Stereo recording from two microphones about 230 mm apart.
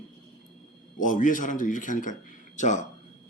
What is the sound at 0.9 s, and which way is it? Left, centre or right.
Speech, left.